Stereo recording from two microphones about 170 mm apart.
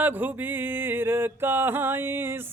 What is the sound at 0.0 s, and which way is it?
Mantra, 10° right (ahead or behind).